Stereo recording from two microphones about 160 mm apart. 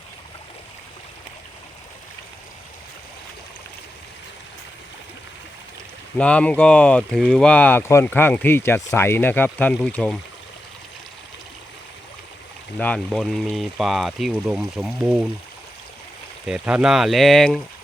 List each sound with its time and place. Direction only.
6.1 s speech: 5° left (ahead or behind)
12.8 s speech: 5° left (ahead or behind)
16.5 s speech: 5° right (ahead or behind)